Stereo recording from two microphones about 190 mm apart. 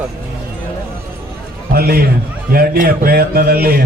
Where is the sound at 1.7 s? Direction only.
55° right (ahead or behind).